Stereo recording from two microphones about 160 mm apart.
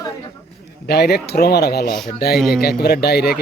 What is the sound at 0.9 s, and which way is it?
Speech, 90° left.